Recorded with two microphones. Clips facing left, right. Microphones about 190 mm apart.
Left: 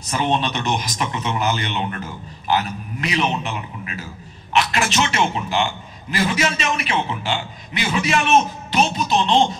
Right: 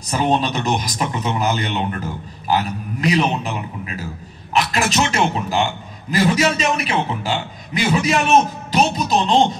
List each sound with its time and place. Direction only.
0.1 s a man's voice: 35° right (ahead or behind)
4.7 s a man's voice: 35° right (ahead or behind)